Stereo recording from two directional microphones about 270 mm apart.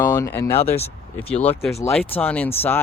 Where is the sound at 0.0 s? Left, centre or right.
Centre.